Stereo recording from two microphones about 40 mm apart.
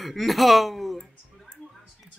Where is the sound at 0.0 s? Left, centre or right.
Centre.